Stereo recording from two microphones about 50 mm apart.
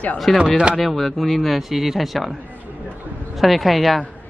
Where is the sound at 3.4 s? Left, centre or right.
Centre.